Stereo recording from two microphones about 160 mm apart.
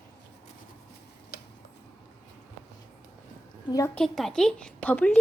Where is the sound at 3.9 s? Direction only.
Centre (ahead or behind).